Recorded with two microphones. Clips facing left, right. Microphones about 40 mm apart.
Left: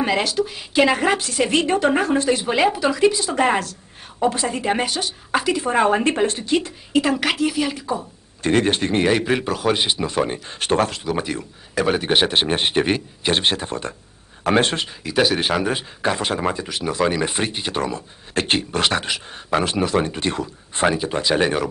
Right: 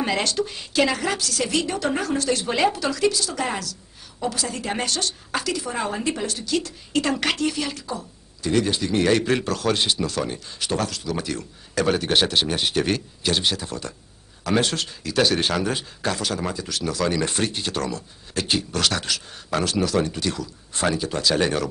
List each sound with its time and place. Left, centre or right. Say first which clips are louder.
0.0 s a woman's voice: left 3 dB; centre
0.7 s speech: left 5 dB; left
5.7 s a woman's voice: left 8 dB; left
6.9 s a woman's voice: left 4 dB; centre
8.4 s a woman's voice: left 4 dB; left
8.9 s speech: right 1 dB; centre
13.3 s a woman's voice: left 4 dB; left
18.3 s speech: left 4 dB; left; by 21.6 s centre